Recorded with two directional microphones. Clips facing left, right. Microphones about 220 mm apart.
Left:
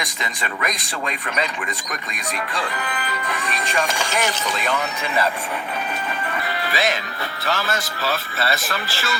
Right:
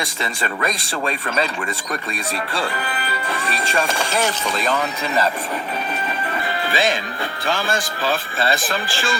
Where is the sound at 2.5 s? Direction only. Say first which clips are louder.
Right 2 dB; 30° right (ahead or behind).